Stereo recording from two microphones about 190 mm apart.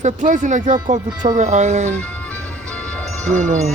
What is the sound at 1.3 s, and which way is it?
Speech, 40° right (ahead or behind).